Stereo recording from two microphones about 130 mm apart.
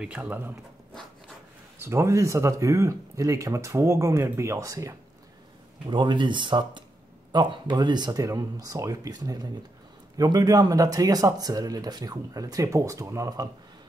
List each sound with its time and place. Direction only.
0.0 s speech: 10° right (ahead or behind)
1.8 s speech: 20° right (ahead or behind)
5.9 s speech: 35° right (ahead or behind)